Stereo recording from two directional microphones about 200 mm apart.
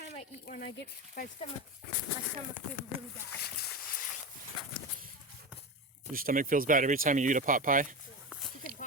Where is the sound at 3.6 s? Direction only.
45° left (ahead or behind).